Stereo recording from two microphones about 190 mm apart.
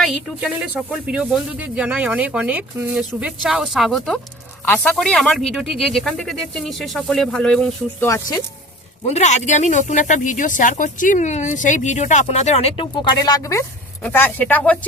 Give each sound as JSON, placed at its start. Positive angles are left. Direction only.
{"t": 0.0, "sound": "speech", "side_deg": 0}
{"t": 9.0, "sound": "speech", "side_deg": 35}